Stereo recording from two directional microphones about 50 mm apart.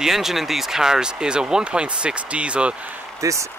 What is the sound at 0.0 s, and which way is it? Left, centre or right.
Speech, centre.